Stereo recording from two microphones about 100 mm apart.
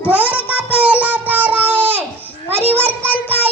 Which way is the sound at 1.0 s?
15° right (ahead or behind).